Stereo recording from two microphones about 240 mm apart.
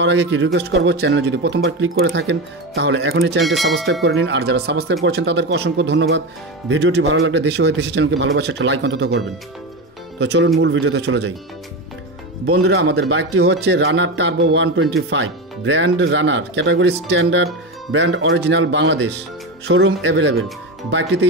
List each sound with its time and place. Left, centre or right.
0.0 s speech: right
3.4 s speech: centre
4.0 s speech: right
10.2 s speech: right
12.5 s speech: right